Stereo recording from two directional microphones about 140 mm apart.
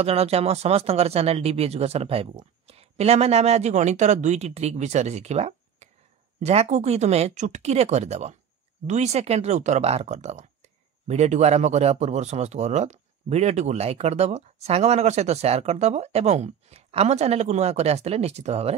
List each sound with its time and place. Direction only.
0.0 s speech: 45° right (ahead or behind)